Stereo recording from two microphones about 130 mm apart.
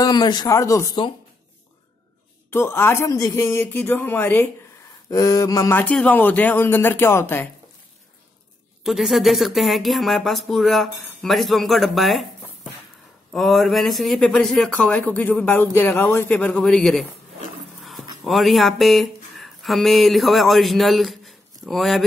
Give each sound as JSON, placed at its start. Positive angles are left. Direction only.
{"t": 0.0, "sound": "speech", "side_deg": 35}
{"t": 2.5, "sound": "speech", "side_deg": 20}
{"t": 5.1, "sound": "speech", "side_deg": 25}
{"t": 5.8, "sound": "speech", "side_deg": 10}
{"t": 8.8, "sound": "speech", "side_deg": 0}
{"t": 13.3, "sound": "speech", "side_deg": 0}
{"t": 17.7, "sound": "a sound", "side_deg": 0}
{"t": 18.2, "sound": "speech", "side_deg": 0}